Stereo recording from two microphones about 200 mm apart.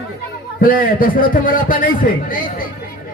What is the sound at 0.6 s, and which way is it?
A man's voice, 45° left (ahead or behind).